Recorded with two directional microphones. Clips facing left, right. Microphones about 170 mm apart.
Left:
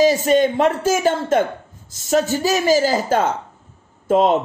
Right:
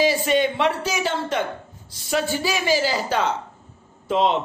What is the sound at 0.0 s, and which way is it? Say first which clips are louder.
A man's voice: left 5 dB; 45° left (ahead or behind).